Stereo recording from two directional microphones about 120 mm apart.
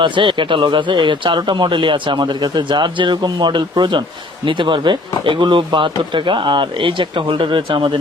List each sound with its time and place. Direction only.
0.0 s speech: 40° right (ahead or behind)